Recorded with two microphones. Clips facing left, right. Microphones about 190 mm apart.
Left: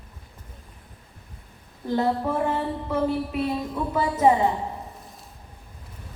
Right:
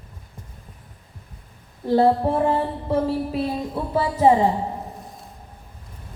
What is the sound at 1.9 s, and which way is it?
Speech, 30° right (ahead or behind).